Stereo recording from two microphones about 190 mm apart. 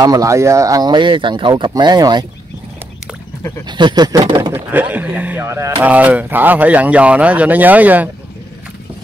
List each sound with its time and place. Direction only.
0.0 s speech: 15° right (ahead or behind)
3.6 s speech: 25° right (ahead or behind)
4.6 s speech: 10° right (ahead or behind)